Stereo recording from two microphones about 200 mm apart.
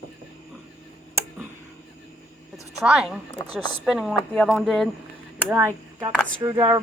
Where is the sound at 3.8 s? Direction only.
Centre (ahead or behind).